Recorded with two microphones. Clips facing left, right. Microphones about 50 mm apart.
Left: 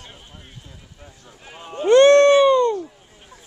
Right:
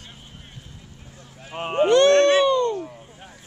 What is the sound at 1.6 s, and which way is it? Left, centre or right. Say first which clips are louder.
Run: right 1 dB; right.